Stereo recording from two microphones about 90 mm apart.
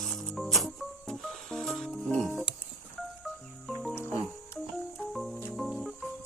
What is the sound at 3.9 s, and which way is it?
Music, 25° left (ahead or behind).